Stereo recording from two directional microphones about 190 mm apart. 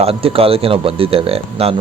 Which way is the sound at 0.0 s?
30° right (ahead or behind).